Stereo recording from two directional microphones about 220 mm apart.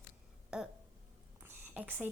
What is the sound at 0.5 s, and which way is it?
Speech, 5° right (ahead or behind).